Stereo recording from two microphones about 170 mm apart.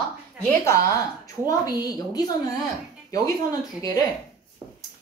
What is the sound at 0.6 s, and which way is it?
A woman's voice, 15° left (ahead or behind).